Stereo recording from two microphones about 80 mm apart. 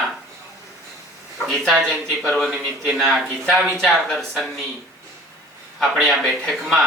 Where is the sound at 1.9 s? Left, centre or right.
Centre.